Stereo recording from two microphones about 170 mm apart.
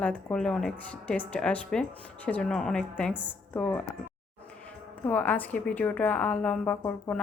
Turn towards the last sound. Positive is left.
turn(degrees=10)  # may be behind; listen again after turning